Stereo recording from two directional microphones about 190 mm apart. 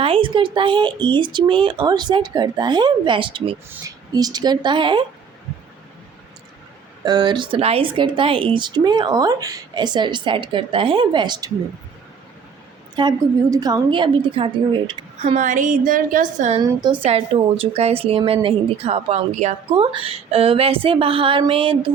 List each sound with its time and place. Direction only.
0.0 s a woman's voice: 30° right (ahead or behind)
7.0 s a woman's voice: 20° right (ahead or behind)
13.0 s a woman's voice: 20° right (ahead or behind); by 16.6 s 40° right (ahead or behind)
16.6 s a woman's voice: 25° right (ahead or behind)